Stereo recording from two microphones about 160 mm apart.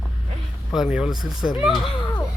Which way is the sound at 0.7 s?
5° right (ahead or behind).